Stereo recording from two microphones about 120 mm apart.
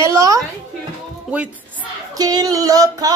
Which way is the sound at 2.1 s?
35° right (ahead or behind).